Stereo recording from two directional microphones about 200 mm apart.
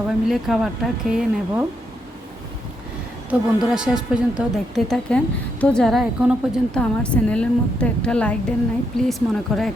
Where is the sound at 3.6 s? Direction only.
5° right (ahead or behind).